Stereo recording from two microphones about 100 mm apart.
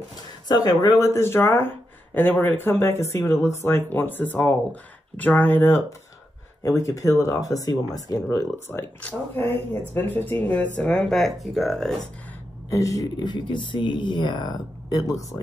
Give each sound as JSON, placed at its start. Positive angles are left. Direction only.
{"t": 0.5, "sound": "speech", "side_deg": 40}
{"t": 8.7, "sound": "speech", "side_deg": 20}
{"t": 12.6, "sound": "speech", "side_deg": 30}